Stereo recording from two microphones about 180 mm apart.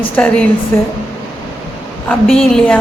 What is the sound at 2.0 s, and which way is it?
Speech, 5° left (ahead or behind).